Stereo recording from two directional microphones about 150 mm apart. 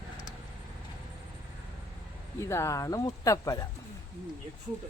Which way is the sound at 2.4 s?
20° left (ahead or behind).